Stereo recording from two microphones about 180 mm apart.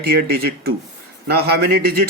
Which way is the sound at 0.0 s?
60° right (ahead or behind).